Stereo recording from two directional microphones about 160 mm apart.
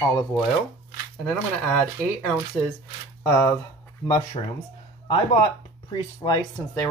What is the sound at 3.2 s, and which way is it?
Speech, 10° left (ahead or behind).